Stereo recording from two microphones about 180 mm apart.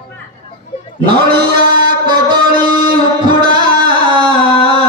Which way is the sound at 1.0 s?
25° right (ahead or behind).